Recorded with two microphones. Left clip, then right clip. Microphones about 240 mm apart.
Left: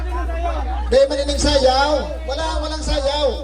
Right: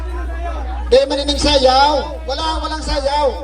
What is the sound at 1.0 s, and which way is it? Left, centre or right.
A man's voice, right.